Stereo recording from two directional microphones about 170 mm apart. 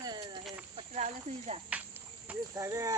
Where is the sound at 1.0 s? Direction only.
40° right (ahead or behind).